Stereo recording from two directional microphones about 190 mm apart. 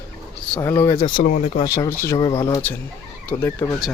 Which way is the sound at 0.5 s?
15° left (ahead or behind).